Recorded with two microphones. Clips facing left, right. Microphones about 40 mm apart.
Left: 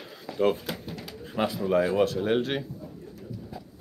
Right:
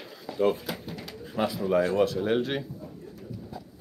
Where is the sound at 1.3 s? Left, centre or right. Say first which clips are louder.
Even; centre.